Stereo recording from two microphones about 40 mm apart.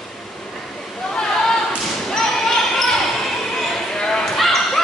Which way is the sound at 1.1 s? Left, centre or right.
Centre.